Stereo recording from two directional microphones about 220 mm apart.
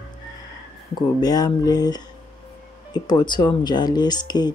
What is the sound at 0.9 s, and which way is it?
Speech, 15° left (ahead or behind).